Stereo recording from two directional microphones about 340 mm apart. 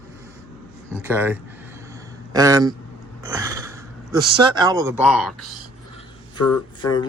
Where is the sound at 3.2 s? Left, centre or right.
Centre.